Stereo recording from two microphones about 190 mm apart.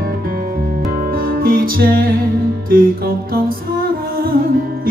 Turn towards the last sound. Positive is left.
turn(degrees=-50)  # may be behind; listen again after turning